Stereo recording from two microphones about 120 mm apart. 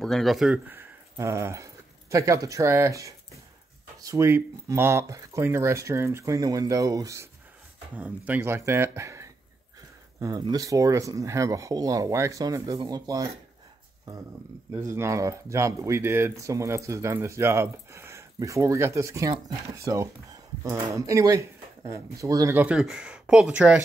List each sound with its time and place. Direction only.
0.0 s speech: centre (ahead or behind)
0.7 s speech: 20° right (ahead or behind)
7.9 s speech: 15° right (ahead or behind)
10.4 s speech: 30° right (ahead or behind)
14.9 s speech: 25° right (ahead or behind)
22.5 s speech: 15° right (ahead or behind)